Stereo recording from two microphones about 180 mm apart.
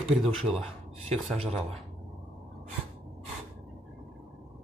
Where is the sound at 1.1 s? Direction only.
35° right (ahead or behind).